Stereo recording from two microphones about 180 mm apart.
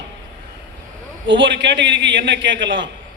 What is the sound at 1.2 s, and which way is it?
A man's voice, 90° right.